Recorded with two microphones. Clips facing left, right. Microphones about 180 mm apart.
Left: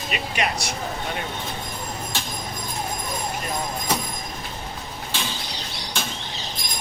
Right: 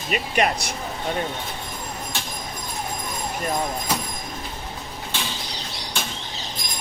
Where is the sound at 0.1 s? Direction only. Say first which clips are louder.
Right 5 dB; 45° right (ahead or behind).